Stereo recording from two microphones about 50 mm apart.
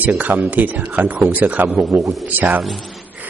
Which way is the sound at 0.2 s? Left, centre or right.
Right.